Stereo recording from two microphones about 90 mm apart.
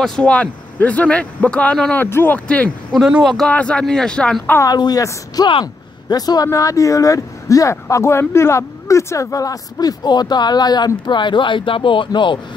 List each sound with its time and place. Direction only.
0.0 s a man's voice: 10° left (ahead or behind)
2.0 s speech: 25° left (ahead or behind)
3.1 s a man's voice: 10° right (ahead or behind)
3.4 s a man's voice: 15° left (ahead or behind)
4.6 s speech: 45° left (ahead or behind)
5.5 s a sound: 65° left (ahead or behind)
6.1 s speech: 45° left (ahead or behind); by 12.4 s 65° left (ahead or behind)